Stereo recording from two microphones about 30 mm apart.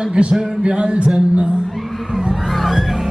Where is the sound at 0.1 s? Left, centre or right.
Right.